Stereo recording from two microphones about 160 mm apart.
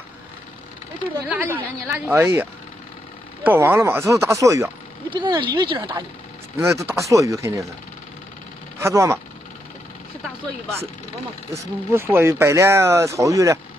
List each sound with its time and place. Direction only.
1.3 s speech: 10° right (ahead or behind)
3.4 s speech: 15° right (ahead or behind)
5.1 s speech: 30° right (ahead or behind)
6.6 s speech: 15° right (ahead or behind)
8.7 s speech: 15° right (ahead or behind)
11.5 s speech: 15° right (ahead or behind)